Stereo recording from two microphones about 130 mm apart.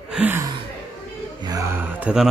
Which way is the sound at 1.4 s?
25° right (ahead or behind).